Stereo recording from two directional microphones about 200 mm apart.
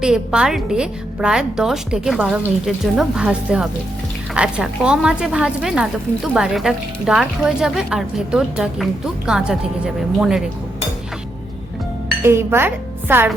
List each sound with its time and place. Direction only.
0.0 s speech: 5° right (ahead or behind)
12.2 s speech: 10° right (ahead or behind)